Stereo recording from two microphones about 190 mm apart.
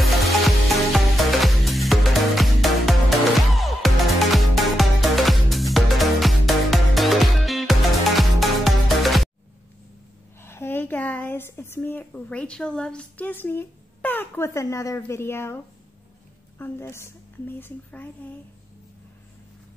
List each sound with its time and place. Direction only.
0.0 s music: centre (ahead or behind)
10.4 s a woman's voice: 10° left (ahead or behind)